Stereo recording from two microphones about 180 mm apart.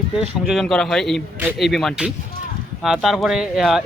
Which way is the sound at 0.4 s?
Centre (ahead or behind).